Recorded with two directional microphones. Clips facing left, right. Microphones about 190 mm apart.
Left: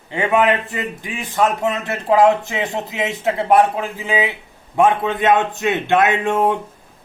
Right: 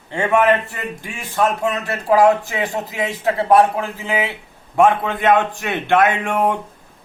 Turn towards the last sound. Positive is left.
turn(degrees=20)  # may be behind; listen again after turning